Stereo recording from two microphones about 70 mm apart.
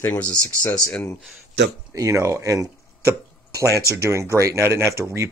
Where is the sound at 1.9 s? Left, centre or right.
Right.